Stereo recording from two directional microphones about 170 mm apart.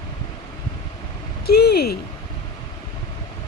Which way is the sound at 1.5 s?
70° left (ahead or behind).